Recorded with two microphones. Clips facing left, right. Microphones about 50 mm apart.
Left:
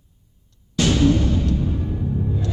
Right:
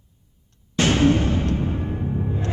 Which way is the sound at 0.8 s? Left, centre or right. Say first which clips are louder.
Even; right.